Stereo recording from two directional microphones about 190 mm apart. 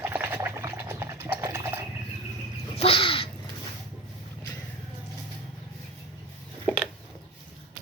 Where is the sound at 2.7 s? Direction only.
30° left (ahead or behind).